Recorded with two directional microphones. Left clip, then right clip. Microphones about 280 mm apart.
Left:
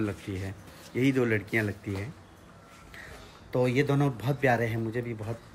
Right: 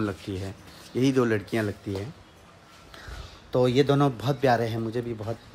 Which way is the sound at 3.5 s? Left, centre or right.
Centre.